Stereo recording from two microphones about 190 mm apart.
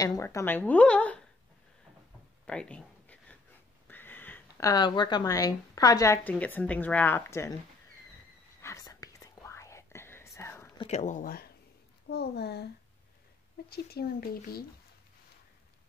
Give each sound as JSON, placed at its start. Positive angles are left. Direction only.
{"t": 0.0, "sound": "a woman's voice", "side_deg": 15}
{"t": 2.4, "sound": "a sound", "side_deg": 5}
{"t": 3.8, "sound": "speech", "side_deg": 10}
{"t": 8.5, "sound": "whispering", "side_deg": 15}
{"t": 10.8, "sound": "speech", "side_deg": 35}
{"t": 12.1, "sound": "speech", "side_deg": 60}
{"t": 13.7, "sound": "speech", "side_deg": 55}